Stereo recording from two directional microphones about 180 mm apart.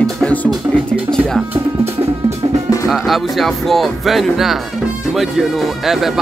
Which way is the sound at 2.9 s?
Centre (ahead or behind).